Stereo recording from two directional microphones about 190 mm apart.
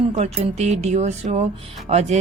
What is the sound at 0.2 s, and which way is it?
Speech, 35° right (ahead or behind).